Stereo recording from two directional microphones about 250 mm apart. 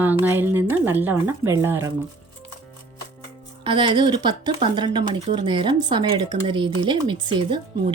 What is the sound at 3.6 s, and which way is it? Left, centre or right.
A woman's voice, centre.